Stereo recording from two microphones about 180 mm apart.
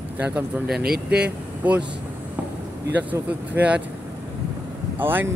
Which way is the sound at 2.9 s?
10° right (ahead or behind).